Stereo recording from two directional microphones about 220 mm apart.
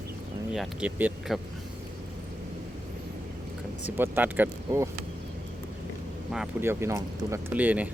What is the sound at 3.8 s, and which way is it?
Speech, 10° right (ahead or behind).